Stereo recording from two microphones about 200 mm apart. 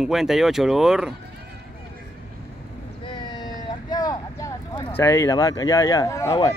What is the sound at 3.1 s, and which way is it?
Vehicle, 20° left (ahead or behind).